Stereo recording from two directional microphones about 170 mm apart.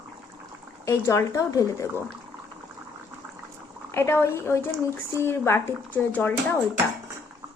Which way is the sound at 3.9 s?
15° left (ahead or behind).